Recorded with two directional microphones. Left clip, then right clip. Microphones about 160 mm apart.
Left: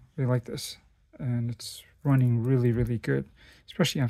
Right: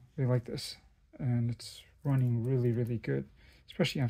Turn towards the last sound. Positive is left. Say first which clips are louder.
# left 5 dB
turn(degrees=30)  # may be behind; listen again after turning